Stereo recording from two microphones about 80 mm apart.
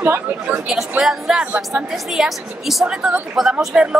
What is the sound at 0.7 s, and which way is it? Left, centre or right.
A woman's voice, centre.